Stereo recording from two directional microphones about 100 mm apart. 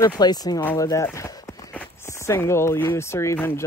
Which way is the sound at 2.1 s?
30° left (ahead or behind).